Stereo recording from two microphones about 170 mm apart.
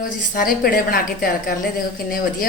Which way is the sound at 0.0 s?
60° left (ahead or behind).